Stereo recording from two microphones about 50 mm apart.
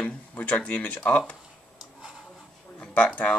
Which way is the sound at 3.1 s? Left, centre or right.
Left.